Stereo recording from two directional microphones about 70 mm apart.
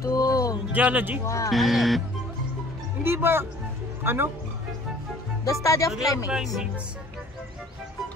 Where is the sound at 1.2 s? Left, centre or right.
Left.